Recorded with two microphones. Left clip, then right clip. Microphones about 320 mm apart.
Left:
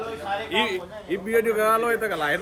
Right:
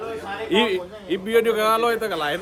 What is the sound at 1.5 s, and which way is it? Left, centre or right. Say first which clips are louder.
Speech: right 2 dB; centre.